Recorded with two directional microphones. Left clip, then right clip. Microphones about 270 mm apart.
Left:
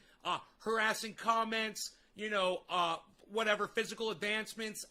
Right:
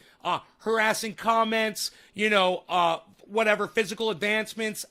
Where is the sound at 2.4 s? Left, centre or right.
Right.